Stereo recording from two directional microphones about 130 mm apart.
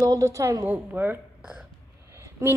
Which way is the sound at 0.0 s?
25° right (ahead or behind).